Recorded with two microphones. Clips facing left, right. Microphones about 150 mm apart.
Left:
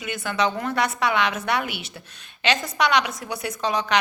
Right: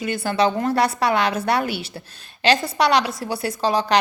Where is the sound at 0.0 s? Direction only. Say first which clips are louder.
Right 5 dB; 35° right (ahead or behind).